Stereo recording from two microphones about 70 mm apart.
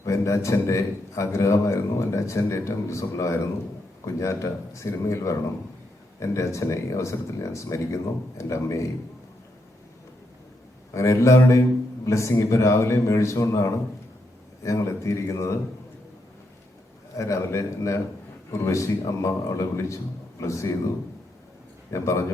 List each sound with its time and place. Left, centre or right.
0.0 s a man's voice: left
10.9 s a man's voice: left
17.2 s a man's voice: left
21.8 s speech: left